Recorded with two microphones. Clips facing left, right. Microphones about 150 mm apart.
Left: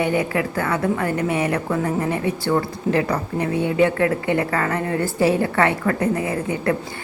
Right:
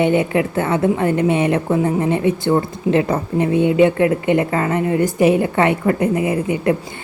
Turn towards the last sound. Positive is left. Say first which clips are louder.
# right 4 dB
turn(degrees=-20)  # may be behind; listen again after turning